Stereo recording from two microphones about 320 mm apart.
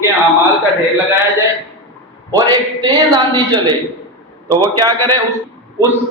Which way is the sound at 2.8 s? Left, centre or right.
Centre.